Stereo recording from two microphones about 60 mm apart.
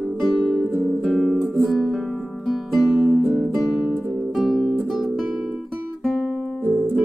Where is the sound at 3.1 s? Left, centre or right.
Right.